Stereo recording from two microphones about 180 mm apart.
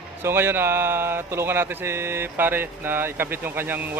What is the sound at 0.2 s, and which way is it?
Speech, 15° right (ahead or behind).